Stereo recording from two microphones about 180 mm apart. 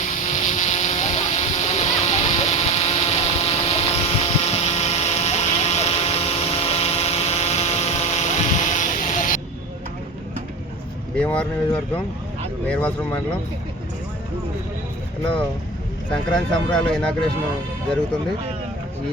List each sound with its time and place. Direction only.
0.0 s vehicle: 40° left (ahead or behind)
11.2 s speech: 5° left (ahead or behind)
16.3 s speech: 5° left (ahead or behind)